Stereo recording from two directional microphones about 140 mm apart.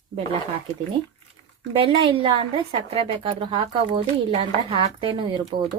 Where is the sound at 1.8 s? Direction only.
40° right (ahead or behind).